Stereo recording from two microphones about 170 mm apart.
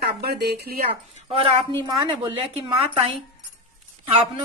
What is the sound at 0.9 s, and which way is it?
Speech, 30° right (ahead or behind).